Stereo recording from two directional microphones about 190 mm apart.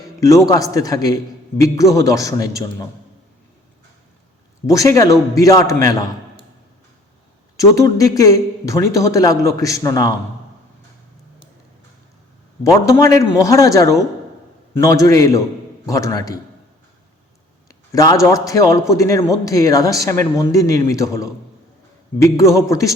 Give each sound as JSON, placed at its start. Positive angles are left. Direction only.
{"t": 0.0, "sound": "a man's voice", "side_deg": 15}
{"t": 4.6, "sound": "a woman's voice", "side_deg": 15}
{"t": 7.6, "sound": "a woman's voice", "side_deg": 15}
{"t": 13.0, "sound": "a woman's voice", "side_deg": 15}
{"t": 17.7, "sound": "a woman's voice", "side_deg": 20}